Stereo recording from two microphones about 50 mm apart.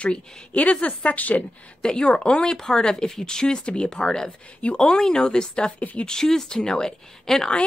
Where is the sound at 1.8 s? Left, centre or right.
Centre.